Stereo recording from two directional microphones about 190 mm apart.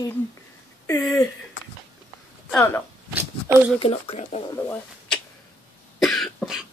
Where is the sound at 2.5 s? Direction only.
10° left (ahead or behind).